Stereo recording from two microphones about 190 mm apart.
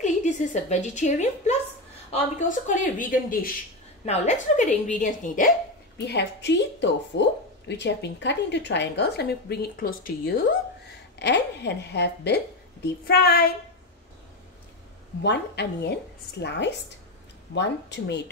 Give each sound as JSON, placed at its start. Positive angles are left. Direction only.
{"t": 0.0, "sound": "a woman's voice", "side_deg": 40}
{"t": 6.0, "sound": "speech", "side_deg": 65}
{"t": 11.1, "sound": "speech", "side_deg": 65}
{"t": 15.2, "sound": "speech", "side_deg": 65}